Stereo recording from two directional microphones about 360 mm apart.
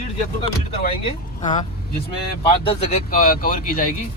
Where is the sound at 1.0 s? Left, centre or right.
Centre.